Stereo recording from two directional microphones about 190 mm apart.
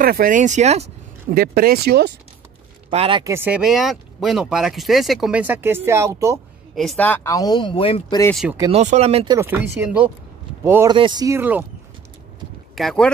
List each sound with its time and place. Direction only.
0.0 s speech: 50° right (ahead or behind)
1.3 s speech: 50° right (ahead or behind)
2.9 s speech: 30° right (ahead or behind)
3.3 s speech: 10° right (ahead or behind)
6.7 s speech: centre (ahead or behind); by 8.2 s 25° left (ahead or behind)
8.4 s speech: 5° right (ahead or behind)
8.7 s speech: 35° right (ahead or behind)
9.8 s speech: 5° right (ahead or behind)
12.7 s speech: 5° left (ahead or behind)